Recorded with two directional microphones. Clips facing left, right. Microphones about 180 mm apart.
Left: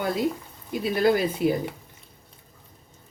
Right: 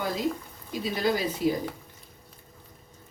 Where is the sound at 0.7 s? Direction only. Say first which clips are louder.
Left 5 dB; 55° left (ahead or behind).